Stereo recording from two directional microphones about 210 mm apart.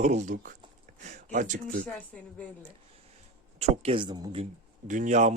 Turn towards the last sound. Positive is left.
turn(degrees=-35)  # may be behind; listen again after turning